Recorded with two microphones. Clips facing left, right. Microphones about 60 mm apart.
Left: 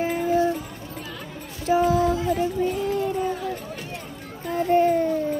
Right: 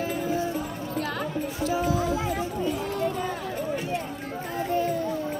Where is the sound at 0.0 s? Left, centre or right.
Left.